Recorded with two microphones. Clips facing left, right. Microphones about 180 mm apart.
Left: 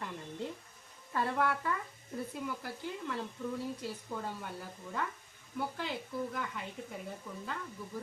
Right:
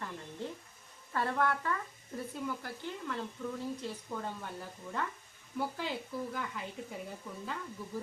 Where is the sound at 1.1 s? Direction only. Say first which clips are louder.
Even; 10° left (ahead or behind).